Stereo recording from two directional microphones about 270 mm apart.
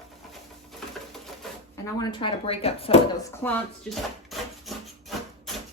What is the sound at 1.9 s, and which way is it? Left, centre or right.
Speech, centre.